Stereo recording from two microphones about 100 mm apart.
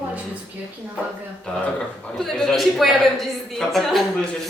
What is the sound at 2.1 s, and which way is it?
A woman's voice, 5° left (ahead or behind).